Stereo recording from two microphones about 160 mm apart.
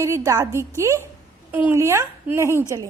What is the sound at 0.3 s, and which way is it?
A woman's voice, 20° right (ahead or behind).